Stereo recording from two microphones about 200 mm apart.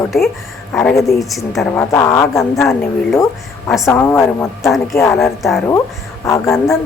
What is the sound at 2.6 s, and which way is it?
Speech, centre (ahead or behind).